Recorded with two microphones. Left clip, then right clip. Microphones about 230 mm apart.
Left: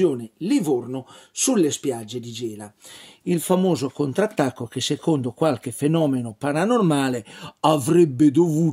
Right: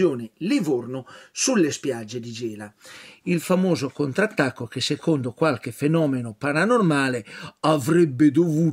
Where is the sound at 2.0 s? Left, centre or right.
Right.